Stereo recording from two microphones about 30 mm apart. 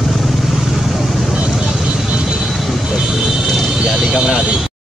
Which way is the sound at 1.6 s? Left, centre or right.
Centre.